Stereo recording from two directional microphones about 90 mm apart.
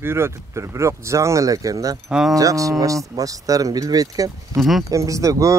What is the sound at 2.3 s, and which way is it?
Speech, 40° right (ahead or behind).